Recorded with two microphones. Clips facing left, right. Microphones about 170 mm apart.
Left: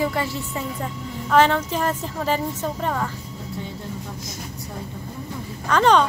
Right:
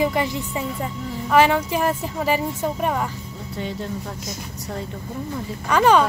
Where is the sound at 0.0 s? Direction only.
15° right (ahead or behind).